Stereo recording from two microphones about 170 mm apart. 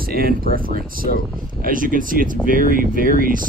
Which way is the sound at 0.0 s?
60° right (ahead or behind).